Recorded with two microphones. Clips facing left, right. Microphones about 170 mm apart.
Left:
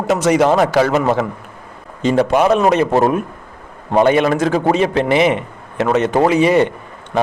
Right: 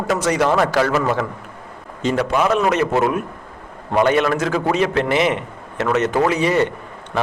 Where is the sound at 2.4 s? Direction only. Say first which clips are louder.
Left 2 dB; 30° left (ahead or behind).